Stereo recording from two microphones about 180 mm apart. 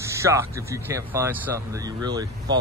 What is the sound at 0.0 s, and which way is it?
Speech, 15° right (ahead or behind).